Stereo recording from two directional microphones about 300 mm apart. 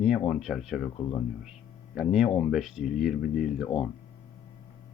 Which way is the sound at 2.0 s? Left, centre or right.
Centre.